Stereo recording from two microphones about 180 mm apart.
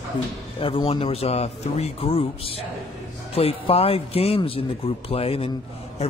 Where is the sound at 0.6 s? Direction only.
30° left (ahead or behind).